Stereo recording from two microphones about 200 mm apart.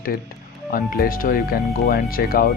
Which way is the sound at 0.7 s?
45° left (ahead or behind).